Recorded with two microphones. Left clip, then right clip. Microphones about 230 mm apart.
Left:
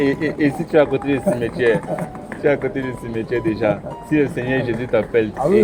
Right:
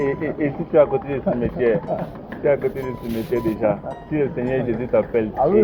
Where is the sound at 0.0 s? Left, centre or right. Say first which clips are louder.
Left 4 dB; left.